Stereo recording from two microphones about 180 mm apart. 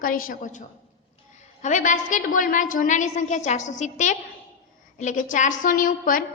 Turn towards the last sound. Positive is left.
turn(degrees=50)  # may be behind; listen again after turning